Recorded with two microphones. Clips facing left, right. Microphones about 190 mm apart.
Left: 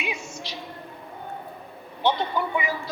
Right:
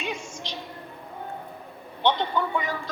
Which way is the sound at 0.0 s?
10° left (ahead or behind).